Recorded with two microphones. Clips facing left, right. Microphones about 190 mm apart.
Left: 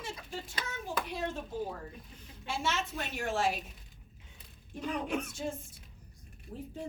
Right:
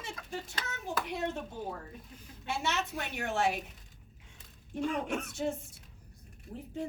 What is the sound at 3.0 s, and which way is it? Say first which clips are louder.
Speech: even; 65° right (ahead or behind).